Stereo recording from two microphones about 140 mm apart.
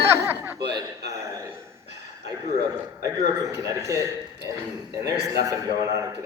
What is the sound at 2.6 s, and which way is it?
A man's voice, 25° right (ahead or behind).